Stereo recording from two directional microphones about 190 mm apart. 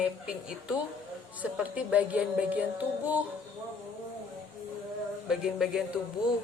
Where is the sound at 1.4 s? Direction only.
10° right (ahead or behind).